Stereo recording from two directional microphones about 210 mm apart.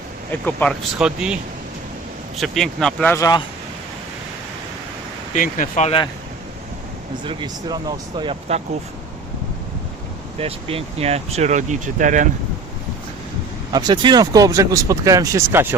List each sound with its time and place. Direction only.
0.3 s speech: 5° left (ahead or behind)
2.4 s speech: centre (ahead or behind)
5.3 s speech: 35° left (ahead or behind)
7.3 s speech: 20° right (ahead or behind)
10.3 s speech: 25° right (ahead or behind)
13.7 s speech: 20° right (ahead or behind)